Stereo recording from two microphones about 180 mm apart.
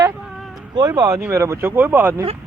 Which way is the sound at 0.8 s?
20° right (ahead or behind).